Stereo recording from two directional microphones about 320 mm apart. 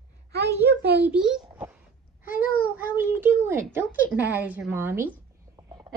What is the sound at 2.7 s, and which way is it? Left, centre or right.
A child's voice, centre.